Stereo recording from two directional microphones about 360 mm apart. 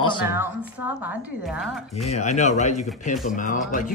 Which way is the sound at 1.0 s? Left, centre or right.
Centre.